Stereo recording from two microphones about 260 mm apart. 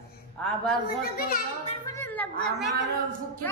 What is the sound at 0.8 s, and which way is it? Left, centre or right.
Speech, left.